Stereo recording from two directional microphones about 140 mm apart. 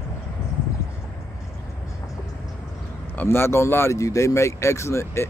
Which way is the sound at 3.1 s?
15° left (ahead or behind).